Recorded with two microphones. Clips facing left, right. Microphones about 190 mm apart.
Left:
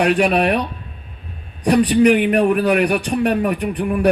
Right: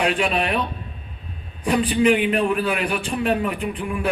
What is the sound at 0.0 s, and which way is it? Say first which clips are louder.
Speech: left 6 dB; 65° left (ahead or behind).